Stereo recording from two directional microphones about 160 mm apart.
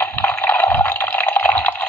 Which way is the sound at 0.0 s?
15° left (ahead or behind).